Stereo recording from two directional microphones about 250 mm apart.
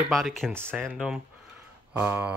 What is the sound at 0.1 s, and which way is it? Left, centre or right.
Speech, centre.